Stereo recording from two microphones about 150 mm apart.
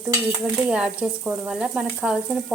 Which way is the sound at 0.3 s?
5° right (ahead or behind).